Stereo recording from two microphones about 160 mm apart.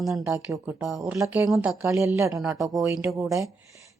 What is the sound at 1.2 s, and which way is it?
Speech, 10° right (ahead or behind).